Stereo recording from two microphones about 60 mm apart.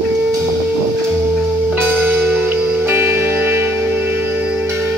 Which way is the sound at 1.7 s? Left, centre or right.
Right.